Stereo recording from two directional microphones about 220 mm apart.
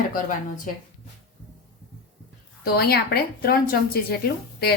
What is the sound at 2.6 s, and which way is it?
Speech, 45° left (ahead or behind).